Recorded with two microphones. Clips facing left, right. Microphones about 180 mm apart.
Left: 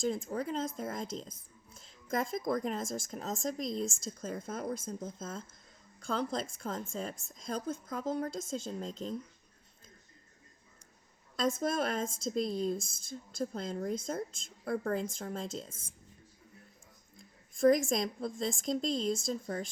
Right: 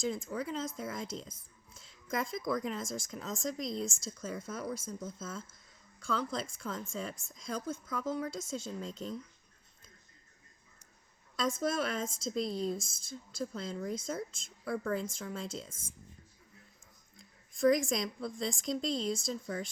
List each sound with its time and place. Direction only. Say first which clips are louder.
0.0 s a woman's voice: left 2 dB; 50° left (ahead or behind)
11.3 s a woman's voice: left 1 dB; 50° left (ahead or behind)
17.2 s a woman's voice: left 2 dB; 50° left (ahead or behind)